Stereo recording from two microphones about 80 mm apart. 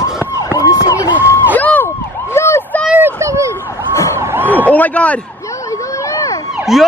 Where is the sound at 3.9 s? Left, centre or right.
Left.